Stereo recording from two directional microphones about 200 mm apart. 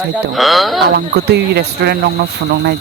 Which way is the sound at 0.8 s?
50° right (ahead or behind).